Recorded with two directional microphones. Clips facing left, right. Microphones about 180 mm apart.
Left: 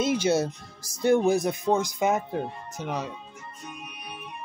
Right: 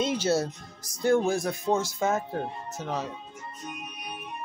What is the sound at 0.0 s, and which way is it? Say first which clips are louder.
Music: left 2 dB; 10° left (ahead or behind).